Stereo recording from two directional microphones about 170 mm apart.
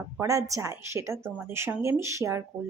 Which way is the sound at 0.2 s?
20° right (ahead or behind).